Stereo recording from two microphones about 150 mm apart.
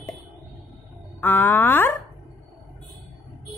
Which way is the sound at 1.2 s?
15° left (ahead or behind).